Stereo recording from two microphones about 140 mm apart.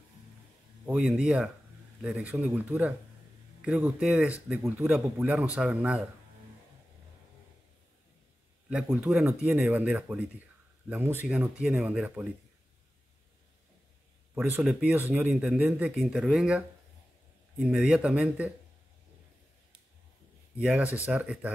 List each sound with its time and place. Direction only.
0.8 s speech: 5° right (ahead or behind)
8.6 s speech: 10° right (ahead or behind)
14.3 s speech: 10° right (ahead or behind)
20.5 s speech: 10° right (ahead or behind)